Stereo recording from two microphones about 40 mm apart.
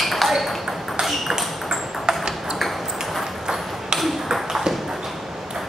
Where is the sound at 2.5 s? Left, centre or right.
Centre.